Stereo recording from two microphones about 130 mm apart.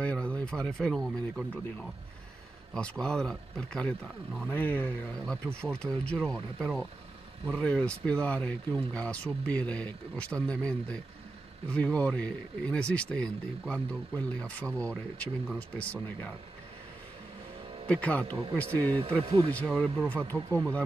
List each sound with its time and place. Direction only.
0.0 s speech: 10° left (ahead or behind)
2.7 s speech: 5° left (ahead or behind)
17.8 s speech: 10° left (ahead or behind)
19.2 s speech: 40° right (ahead or behind)
19.5 s speech: 10° left (ahead or behind)